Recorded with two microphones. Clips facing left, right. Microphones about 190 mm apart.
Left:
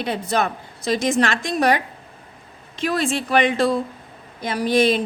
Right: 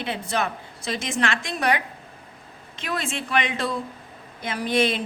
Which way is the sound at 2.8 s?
35° left (ahead or behind).